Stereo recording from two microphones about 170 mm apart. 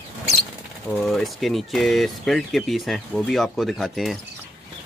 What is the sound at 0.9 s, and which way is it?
Speech, centre (ahead or behind).